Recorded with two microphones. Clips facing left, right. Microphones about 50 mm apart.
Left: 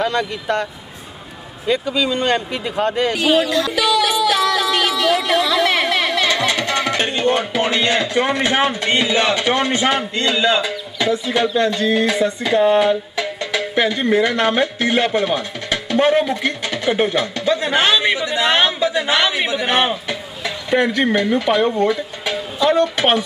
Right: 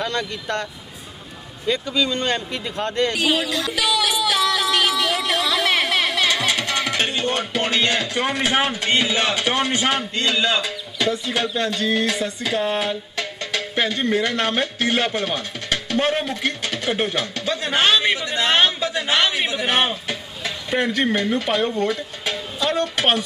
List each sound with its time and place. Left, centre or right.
0.0 s speech: centre
1.7 s speech: centre
3.5 s music: left
3.9 s a sound: left
5.4 s a sound: centre
7.0 s speech: centre
12.2 s music: centre
17.5 s a man's voice: centre
22.2 s a sound: centre